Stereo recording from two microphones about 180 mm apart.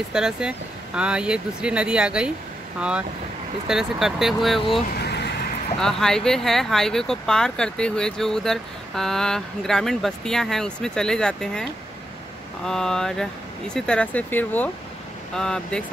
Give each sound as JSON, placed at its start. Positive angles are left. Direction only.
{"t": 0.1, "sound": "speech", "side_deg": -5}
{"t": 3.6, "sound": "speech", "side_deg": 0}
{"t": 4.9, "sound": "vehicle", "side_deg": 65}
{"t": 5.8, "sound": "speech", "side_deg": 5}
{"t": 12.6, "sound": "speech", "side_deg": 5}